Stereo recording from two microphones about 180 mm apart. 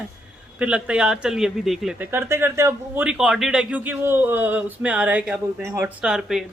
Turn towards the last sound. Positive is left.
turn(degrees=0)  # may be behind; listen again after turning